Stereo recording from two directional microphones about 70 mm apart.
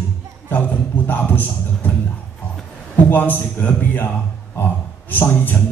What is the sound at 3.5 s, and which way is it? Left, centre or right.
A man's voice, left.